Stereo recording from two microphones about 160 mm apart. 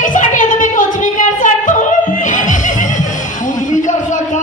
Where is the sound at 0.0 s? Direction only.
55° left (ahead or behind).